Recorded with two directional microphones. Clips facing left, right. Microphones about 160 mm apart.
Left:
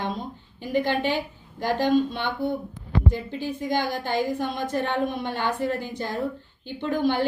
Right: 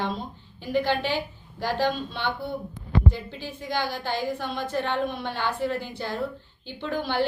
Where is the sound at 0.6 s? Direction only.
50° left (ahead or behind).